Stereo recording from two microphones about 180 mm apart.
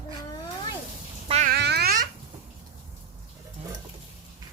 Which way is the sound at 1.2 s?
35° right (ahead or behind).